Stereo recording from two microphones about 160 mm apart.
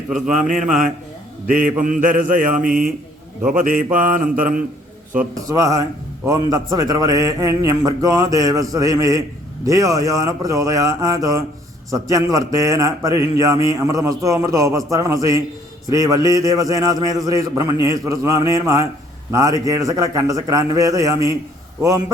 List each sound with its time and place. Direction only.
0.3 s mantra: 50° right (ahead or behind)
5.3 s speech: 20° right (ahead or behind)